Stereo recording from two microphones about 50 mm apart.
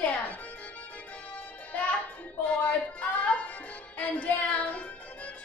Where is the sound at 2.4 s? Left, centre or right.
Left.